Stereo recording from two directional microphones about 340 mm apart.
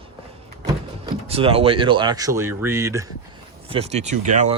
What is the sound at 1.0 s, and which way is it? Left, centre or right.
Speech, centre.